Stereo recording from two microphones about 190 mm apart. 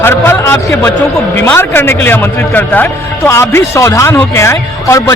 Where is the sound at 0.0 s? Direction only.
10° left (ahead or behind).